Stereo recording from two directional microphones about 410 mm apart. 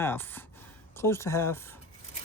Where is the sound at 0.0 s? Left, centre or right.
Centre.